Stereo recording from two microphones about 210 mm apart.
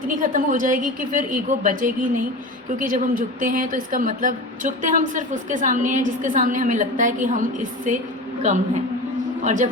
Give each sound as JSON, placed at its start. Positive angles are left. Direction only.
{"t": 0.1, "sound": "a woman's voice", "side_deg": -40}